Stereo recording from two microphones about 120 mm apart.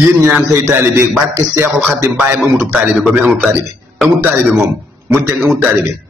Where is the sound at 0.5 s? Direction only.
20° right (ahead or behind).